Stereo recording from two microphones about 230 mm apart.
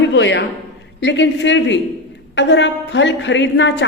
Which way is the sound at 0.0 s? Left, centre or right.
Left.